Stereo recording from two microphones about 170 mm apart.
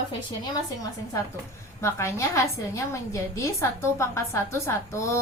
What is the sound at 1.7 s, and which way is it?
A woman's voice, 15° left (ahead or behind).